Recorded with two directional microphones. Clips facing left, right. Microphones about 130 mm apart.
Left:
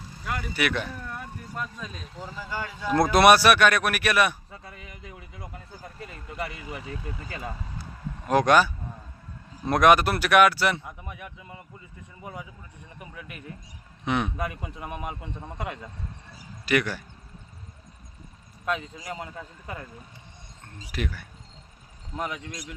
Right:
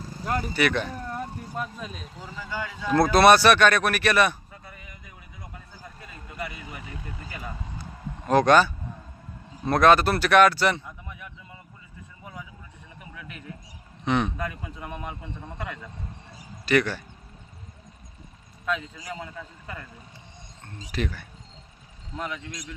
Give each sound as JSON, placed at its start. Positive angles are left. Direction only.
{"t": 0.2, "sound": "speech", "side_deg": -40}
{"t": 0.5, "sound": "speech", "side_deg": 5}
{"t": 1.0, "sound": "a sound", "side_deg": -35}
{"t": 2.4, "sound": "speech", "side_deg": 10}
{"t": 4.5, "sound": "chink", "side_deg": 85}
{"t": 8.3, "sound": "speech", "side_deg": 10}
{"t": 11.0, "sound": "a sound", "side_deg": 60}
{"t": 14.0, "sound": "speech", "side_deg": 10}
{"t": 16.3, "sound": "a sound", "side_deg": 5}
{"t": 18.7, "sound": "a man's voice", "side_deg": 25}
{"t": 20.7, "sound": "speech", "side_deg": 5}